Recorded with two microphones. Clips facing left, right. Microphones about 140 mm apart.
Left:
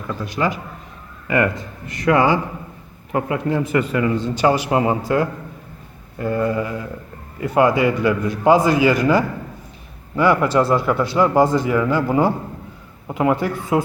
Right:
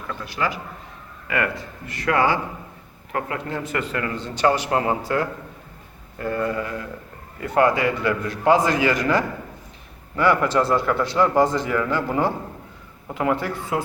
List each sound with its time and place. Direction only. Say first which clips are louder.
0.3 s a man's voice: left 4 dB; 20° left (ahead or behind)
1.9 s a man's voice: left 4 dB; 20° left (ahead or behind)